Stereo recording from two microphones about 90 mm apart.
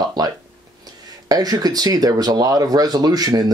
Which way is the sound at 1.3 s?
45° right (ahead or behind).